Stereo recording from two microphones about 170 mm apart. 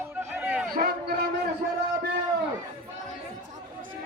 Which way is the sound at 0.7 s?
65° right (ahead or behind).